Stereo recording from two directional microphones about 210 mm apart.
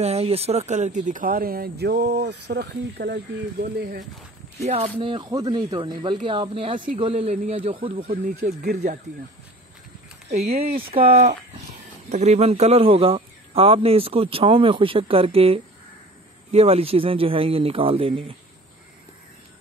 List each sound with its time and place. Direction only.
0.0 s speech: 30° right (ahead or behind)
4.9 s speech: 25° right (ahead or behind)
10.3 s speech: 30° right (ahead or behind)